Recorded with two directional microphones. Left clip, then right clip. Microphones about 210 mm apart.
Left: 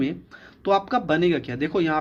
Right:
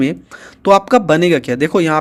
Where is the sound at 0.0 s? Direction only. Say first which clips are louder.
Right 9 dB; 35° right (ahead or behind).